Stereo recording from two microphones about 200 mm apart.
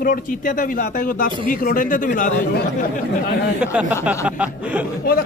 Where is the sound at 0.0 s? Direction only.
45° left (ahead or behind).